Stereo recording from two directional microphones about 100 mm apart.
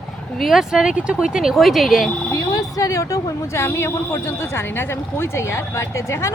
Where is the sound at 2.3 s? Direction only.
35° left (ahead or behind).